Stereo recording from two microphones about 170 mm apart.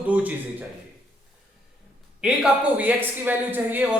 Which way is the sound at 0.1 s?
10° right (ahead or behind).